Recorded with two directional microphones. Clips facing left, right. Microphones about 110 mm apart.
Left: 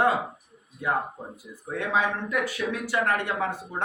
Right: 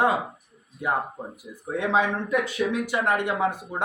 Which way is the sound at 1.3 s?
20° right (ahead or behind).